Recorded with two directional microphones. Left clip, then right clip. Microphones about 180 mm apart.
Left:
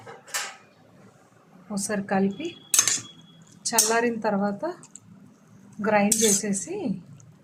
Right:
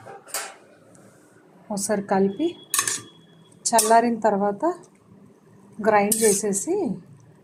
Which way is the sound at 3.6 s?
10° right (ahead or behind).